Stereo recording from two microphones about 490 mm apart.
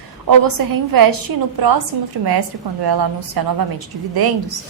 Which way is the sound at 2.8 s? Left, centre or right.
Right.